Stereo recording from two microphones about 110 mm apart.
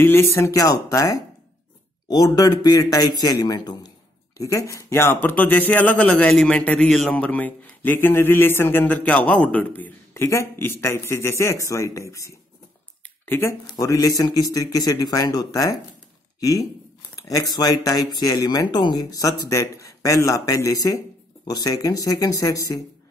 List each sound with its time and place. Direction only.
0.0 s speech: 20° left (ahead or behind)